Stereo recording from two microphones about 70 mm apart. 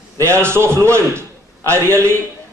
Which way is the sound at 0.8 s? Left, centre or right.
Right.